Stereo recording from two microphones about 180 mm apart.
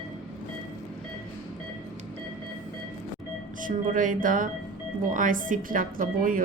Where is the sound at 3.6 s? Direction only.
45° right (ahead or behind).